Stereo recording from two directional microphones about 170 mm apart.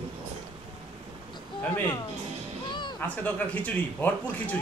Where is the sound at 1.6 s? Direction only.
10° left (ahead or behind).